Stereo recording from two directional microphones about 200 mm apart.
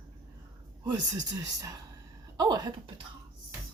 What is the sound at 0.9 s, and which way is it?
Speech, 20° right (ahead or behind).